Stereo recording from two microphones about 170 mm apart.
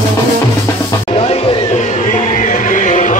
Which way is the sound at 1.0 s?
40° left (ahead or behind).